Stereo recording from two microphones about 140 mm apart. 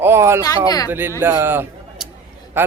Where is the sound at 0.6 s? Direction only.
25° left (ahead or behind).